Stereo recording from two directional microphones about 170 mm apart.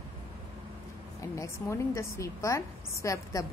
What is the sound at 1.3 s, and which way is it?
A woman's voice, 15° left (ahead or behind).